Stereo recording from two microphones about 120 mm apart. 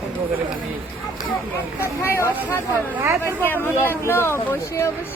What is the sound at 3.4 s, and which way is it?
Speech, 15° left (ahead or behind).